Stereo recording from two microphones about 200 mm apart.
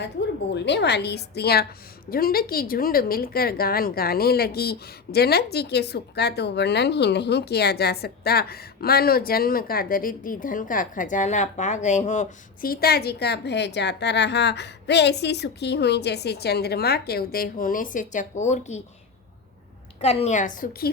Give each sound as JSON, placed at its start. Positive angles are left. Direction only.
{"t": 0.5, "sound": "a woman's voice", "side_deg": 60}
{"t": 20.0, "sound": "a woman's voice", "side_deg": 30}